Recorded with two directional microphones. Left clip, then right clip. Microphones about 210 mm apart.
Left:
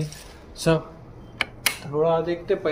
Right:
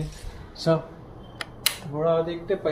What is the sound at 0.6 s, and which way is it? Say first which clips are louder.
Speech: left 1 dB; 30° left (ahead or behind).